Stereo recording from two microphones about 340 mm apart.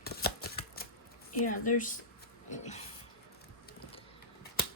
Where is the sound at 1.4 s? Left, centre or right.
Left.